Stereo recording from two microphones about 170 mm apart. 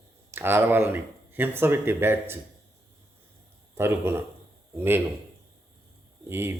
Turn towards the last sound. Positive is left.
turn(degrees=-15)  # may be behind; listen again after turning